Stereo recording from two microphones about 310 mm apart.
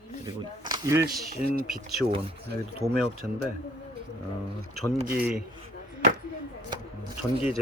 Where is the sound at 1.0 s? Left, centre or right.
Right.